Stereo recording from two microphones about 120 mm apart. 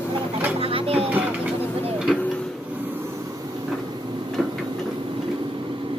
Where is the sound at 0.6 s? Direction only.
50° right (ahead or behind).